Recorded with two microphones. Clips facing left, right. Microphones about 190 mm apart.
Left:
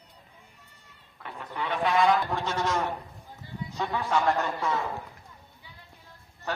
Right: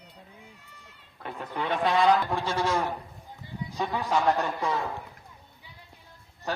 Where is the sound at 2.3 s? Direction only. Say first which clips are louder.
Right 1 dB; 10° right (ahead or behind).